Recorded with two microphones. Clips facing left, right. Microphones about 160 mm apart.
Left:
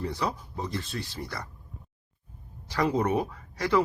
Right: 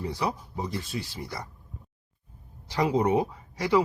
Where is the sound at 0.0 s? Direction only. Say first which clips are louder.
Right 1 dB; 15° right (ahead or behind).